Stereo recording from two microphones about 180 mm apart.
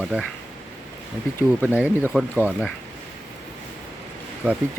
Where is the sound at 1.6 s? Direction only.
10° right (ahead or behind).